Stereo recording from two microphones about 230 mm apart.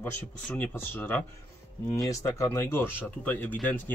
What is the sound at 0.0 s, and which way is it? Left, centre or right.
Speech, centre.